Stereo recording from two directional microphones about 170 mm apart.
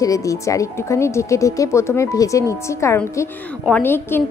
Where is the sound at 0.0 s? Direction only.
20° left (ahead or behind).